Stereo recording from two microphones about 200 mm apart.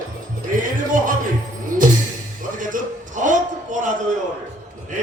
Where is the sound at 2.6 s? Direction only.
40° right (ahead or behind).